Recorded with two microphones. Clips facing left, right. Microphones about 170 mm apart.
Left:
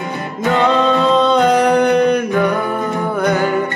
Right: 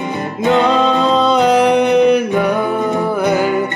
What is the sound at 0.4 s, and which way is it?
Music, 20° right (ahead or behind).